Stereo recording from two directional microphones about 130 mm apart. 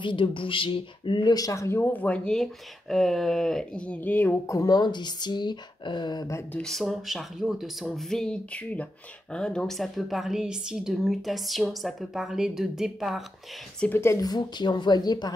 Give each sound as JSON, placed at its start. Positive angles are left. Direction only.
{"t": 0.0, "sound": "speech", "side_deg": 40}
{"t": 6.5, "sound": "a woman's voice", "side_deg": 5}
{"t": 13.7, "sound": "speech", "side_deg": 15}